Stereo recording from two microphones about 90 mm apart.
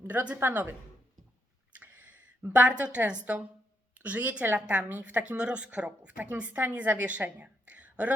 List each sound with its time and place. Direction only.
0.0 s a woman's voice: 20° right (ahead or behind)
1.8 s a woman's voice: 20° right (ahead or behind)